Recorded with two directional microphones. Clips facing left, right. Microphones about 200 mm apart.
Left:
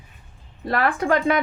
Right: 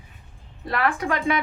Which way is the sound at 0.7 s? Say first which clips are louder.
Left 4 dB; 35° left (ahead or behind).